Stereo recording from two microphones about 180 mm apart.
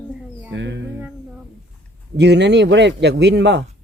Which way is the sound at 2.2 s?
75° right (ahead or behind).